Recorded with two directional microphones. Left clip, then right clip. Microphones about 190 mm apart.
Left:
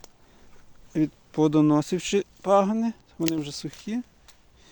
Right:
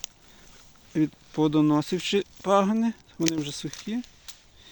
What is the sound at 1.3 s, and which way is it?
Speech, 15° left (ahead or behind).